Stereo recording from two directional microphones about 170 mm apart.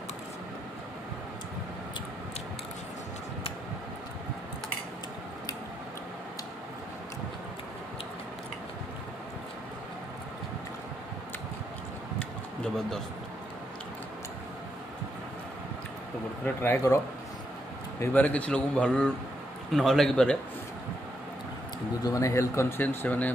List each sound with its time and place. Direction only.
16.4 s speech: 10° left (ahead or behind)
18.0 s a man's voice: 10° left (ahead or behind)
22.0 s speech: 20° left (ahead or behind)